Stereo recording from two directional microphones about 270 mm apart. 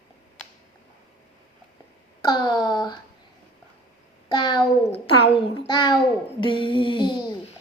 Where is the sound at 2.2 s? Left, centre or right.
Centre.